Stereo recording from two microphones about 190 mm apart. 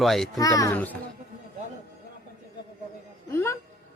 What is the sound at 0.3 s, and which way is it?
Speech, 20° left (ahead or behind).